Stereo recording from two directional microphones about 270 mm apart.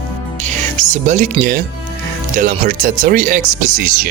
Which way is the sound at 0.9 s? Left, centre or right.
Right.